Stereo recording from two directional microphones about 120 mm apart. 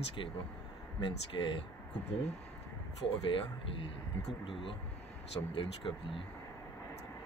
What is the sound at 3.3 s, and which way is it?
Speech, 45° left (ahead or behind).